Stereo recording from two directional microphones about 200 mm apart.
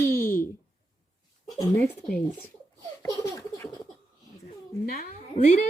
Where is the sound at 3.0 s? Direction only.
15° left (ahead or behind).